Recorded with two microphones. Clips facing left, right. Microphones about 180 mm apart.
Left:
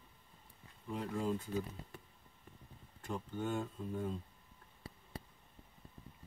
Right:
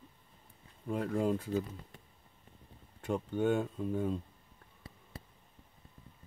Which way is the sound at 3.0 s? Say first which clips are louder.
Right 9 dB; 65° right (ahead or behind).